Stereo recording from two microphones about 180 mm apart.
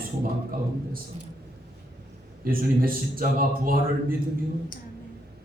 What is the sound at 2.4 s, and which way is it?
A man's voice, 55° right (ahead or behind).